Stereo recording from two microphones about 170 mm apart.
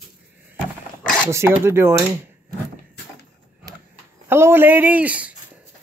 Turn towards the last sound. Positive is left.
turn(degrees=-10)  # may be behind; listen again after turning